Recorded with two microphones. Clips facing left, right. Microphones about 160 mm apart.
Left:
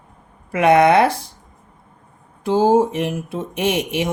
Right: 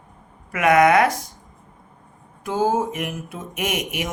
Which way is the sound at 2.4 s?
30° left (ahead or behind).